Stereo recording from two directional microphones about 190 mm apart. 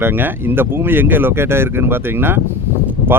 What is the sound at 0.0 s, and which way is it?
Speech, 10° right (ahead or behind).